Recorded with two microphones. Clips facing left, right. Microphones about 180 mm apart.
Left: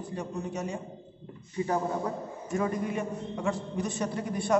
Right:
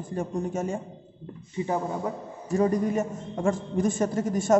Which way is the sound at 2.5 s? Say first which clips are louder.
Right 6 dB; 35° right (ahead or behind).